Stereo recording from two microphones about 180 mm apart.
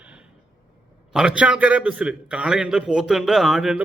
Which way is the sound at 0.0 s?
5° right (ahead or behind).